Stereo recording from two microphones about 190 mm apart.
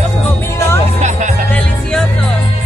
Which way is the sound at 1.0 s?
40° right (ahead or behind).